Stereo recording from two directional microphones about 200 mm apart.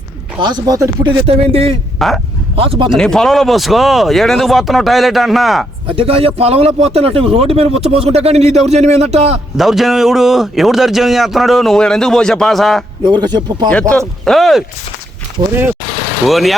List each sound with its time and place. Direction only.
0.3 s speech: 20° right (ahead or behind)
2.0 s speech: centre (ahead or behind)
2.6 s speech: 25° right (ahead or behind)
3.0 s speech: 5° left (ahead or behind)
6.0 s speech: 30° right (ahead or behind)
9.6 s speech: centre (ahead or behind)
13.0 s speech: 20° right (ahead or behind)
14.3 s speech: centre (ahead or behind)
16.2 s speech: centre (ahead or behind)